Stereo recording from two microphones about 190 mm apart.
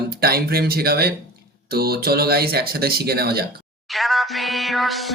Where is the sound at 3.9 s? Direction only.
Centre (ahead or behind).